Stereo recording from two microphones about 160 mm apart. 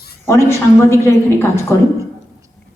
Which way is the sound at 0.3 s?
15° left (ahead or behind).